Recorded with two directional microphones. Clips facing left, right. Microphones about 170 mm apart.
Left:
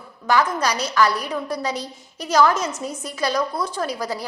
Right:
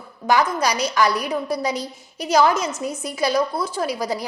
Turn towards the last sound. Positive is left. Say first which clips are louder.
# right 2 dB
turn(degrees=-10)  # may be behind; listen again after turning